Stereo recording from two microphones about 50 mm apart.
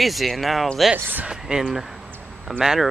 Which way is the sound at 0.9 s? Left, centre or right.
Right.